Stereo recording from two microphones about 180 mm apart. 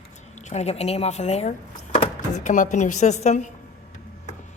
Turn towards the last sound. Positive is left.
turn(degrees=40)  # may be behind; listen again after turning